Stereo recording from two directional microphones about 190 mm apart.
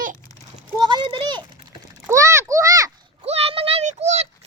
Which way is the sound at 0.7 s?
25° right (ahead or behind).